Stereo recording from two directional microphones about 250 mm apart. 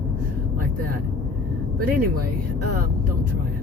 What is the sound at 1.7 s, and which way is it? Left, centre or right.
Speech, right.